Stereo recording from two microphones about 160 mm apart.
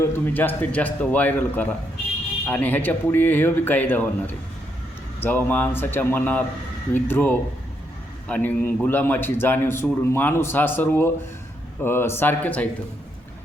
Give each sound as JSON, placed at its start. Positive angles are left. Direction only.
{"t": 0.0, "sound": "a man's voice", "side_deg": 10}